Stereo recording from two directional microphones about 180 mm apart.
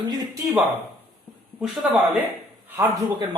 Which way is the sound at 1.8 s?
5° right (ahead or behind).